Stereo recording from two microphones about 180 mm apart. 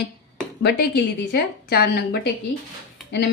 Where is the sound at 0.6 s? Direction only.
65° left (ahead or behind).